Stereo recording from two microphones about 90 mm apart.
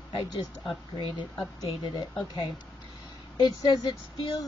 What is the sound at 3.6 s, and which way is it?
Speech, 45° left (ahead or behind).